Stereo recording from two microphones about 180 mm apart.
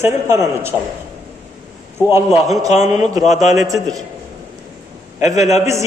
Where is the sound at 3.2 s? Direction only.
40° left (ahead or behind).